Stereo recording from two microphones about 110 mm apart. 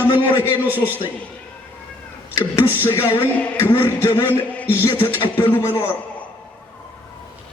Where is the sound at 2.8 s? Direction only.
20° left (ahead or behind).